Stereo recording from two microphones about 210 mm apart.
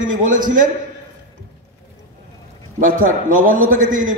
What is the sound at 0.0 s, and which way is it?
Speech, 40° right (ahead or behind).